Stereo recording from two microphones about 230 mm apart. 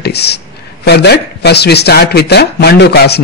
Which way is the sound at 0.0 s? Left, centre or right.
Left.